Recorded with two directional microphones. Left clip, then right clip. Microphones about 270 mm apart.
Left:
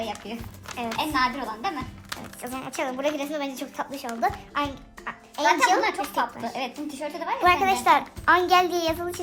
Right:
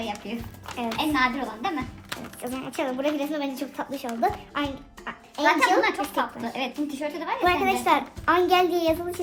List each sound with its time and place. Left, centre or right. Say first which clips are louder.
0.0 s a woman's voice: even; left